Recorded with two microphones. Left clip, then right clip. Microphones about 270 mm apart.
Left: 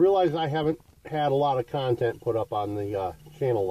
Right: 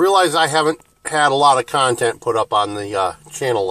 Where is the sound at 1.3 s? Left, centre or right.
Centre.